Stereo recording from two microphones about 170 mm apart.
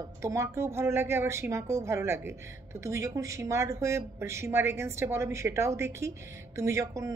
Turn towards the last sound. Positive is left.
turn(degrees=-20)  # may be behind; listen again after turning